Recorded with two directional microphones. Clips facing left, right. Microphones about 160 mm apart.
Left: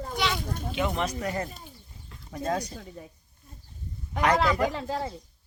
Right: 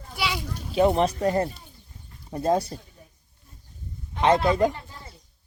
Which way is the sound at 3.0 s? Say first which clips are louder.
Left 9 dB; 90° left.